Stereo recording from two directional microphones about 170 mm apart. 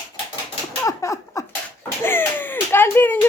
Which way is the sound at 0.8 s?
20° left (ahead or behind).